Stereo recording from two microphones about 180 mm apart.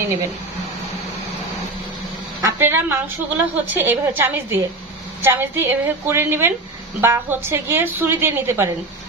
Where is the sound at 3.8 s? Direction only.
10° right (ahead or behind).